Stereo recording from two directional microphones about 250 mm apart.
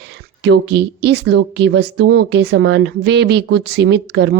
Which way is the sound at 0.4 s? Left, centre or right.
Right.